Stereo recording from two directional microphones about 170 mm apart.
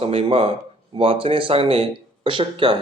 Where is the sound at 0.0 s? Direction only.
35° right (ahead or behind).